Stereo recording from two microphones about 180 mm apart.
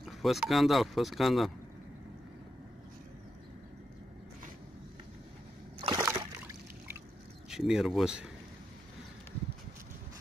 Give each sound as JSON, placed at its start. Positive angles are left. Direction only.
{"t": 0.0, "sound": "speech", "side_deg": 0}
{"t": 5.8, "sound": "splash", "side_deg": -20}
{"t": 7.4, "sound": "speech", "side_deg": -5}